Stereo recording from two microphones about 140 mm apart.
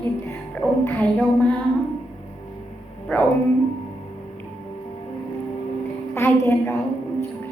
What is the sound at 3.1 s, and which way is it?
Speech, 10° left (ahead or behind).